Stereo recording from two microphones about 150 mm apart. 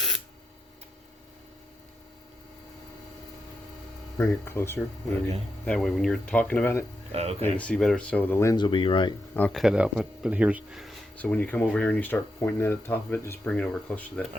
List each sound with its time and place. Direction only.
4.2 s speech: 15° left (ahead or behind)
5.6 s speech: 5° left (ahead or behind)
7.1 s speech: 45° right (ahead or behind)
7.4 s speech: 10° left (ahead or behind)
8.5 s speech: 30° left (ahead or behind)
9.3 s speech: 10° left (ahead or behind)
9.6 s speech: 5° right (ahead or behind)
11.2 s speech: 10° left (ahead or behind)